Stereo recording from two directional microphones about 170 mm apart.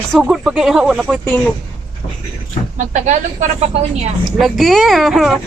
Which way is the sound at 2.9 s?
45° right (ahead or behind).